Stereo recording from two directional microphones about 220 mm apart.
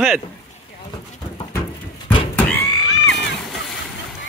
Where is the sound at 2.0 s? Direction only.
5° left (ahead or behind).